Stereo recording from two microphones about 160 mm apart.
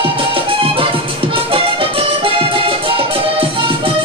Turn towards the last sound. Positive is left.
turn(degrees=-35)  # may be behind; listen again after turning